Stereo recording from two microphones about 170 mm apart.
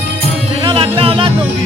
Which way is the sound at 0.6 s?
30° right (ahead or behind).